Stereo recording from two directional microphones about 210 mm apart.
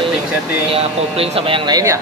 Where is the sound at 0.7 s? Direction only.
25° right (ahead or behind).